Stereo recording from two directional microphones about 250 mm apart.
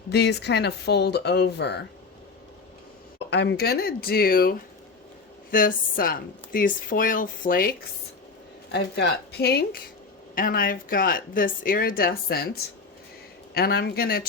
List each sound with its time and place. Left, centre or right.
0.1 s a woman's voice: left
3.2 s a woman's voice: left
13.5 s a woman's voice: left